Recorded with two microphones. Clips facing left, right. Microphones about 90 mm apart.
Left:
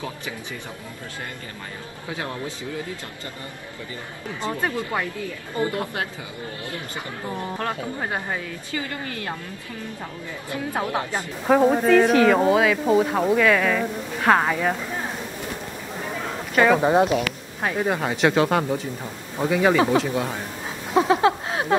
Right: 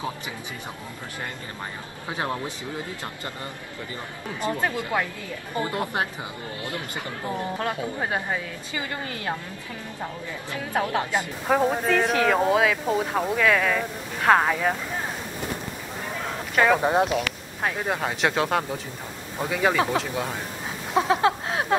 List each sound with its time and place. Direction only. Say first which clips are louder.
2.0 s a woman's voice: right 2 dB; 25° right (ahead or behind)
5.7 s a woman's voice: right 1 dB; 25° right (ahead or behind)
7.5 s speech: even; 10° right (ahead or behind)
8.7 s a woman's voice: left 1 dB; 20° right (ahead or behind)
11.4 s speech: left 6 dB; centre (ahead or behind)
20.9 s a sound: left 3 dB; centre (ahead or behind)